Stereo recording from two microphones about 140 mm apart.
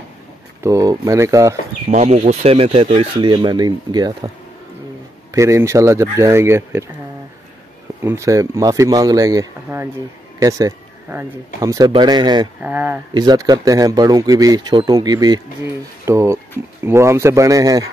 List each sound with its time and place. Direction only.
0.6 s speech: 25° right (ahead or behind)
1.9 s speech: 50° right (ahead or behind); by 4.3 s 30° right (ahead or behind)
5.3 s speech: 20° right (ahead or behind)
8.0 s speech: 20° right (ahead or behind)
12.6 s speech: 10° right (ahead or behind)
13.1 s speech: 30° right (ahead or behind)